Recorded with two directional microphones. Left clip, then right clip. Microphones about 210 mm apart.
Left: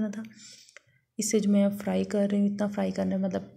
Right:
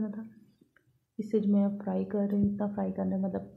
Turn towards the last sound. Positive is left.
turn(degrees=25)  # may be behind; listen again after turning